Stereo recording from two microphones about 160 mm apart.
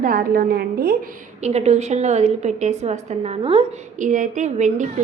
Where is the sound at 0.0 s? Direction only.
65° right (ahead or behind).